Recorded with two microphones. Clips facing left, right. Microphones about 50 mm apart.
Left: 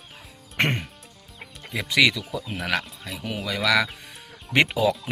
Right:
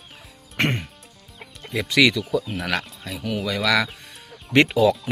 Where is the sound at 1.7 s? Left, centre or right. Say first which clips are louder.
Right 2 dB; centre.